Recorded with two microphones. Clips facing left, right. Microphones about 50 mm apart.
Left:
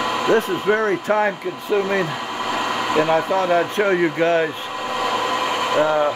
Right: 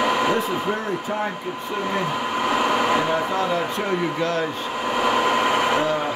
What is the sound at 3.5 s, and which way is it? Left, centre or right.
Speech, left.